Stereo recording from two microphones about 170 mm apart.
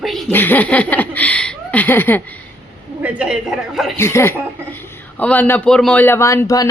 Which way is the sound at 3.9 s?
15° left (ahead or behind).